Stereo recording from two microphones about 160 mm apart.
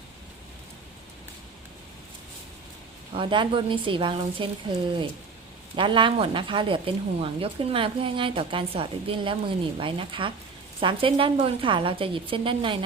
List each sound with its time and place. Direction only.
3.1 s a woman's voice: 30° right (ahead or behind)
5.7 s a woman's voice: 30° right (ahead or behind)